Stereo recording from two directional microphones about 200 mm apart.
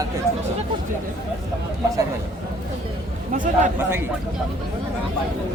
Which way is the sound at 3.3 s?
40° right (ahead or behind).